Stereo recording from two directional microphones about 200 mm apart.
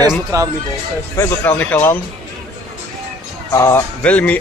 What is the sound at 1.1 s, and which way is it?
Speech, 10° left (ahead or behind).